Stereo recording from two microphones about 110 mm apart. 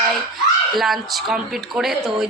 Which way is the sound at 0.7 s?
Centre (ahead or behind).